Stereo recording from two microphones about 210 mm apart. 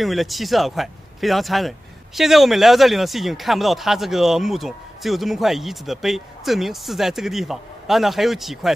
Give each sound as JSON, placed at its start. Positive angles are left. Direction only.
{"t": 0.0, "sound": "speech", "side_deg": 0}